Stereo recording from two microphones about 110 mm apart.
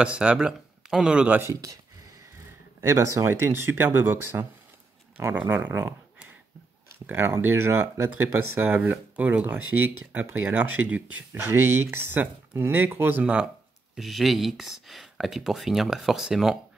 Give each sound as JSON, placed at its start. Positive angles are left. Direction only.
{"t": 0.0, "sound": "a man's voice", "side_deg": -10}
{"t": 2.8, "sound": "speech", "side_deg": -25}
{"t": 7.1, "sound": "speech", "side_deg": -20}
{"t": 13.9, "sound": "speech", "side_deg": 0}